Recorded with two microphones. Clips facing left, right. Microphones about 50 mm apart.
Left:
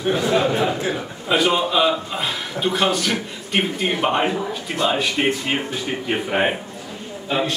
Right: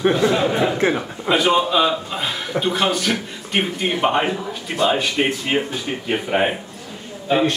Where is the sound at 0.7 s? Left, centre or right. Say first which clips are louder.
Right 5 dB; right.